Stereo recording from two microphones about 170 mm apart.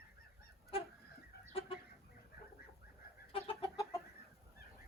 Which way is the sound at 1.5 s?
30° left (ahead or behind).